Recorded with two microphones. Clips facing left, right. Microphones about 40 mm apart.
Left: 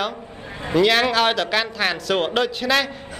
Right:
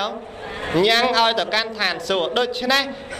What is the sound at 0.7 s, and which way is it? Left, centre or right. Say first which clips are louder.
A man's voice: even; centre.